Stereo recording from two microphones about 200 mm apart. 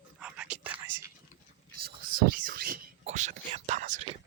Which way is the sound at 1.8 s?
45° right (ahead or behind).